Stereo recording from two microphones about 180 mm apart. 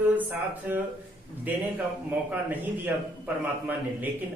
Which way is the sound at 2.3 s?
10° right (ahead or behind).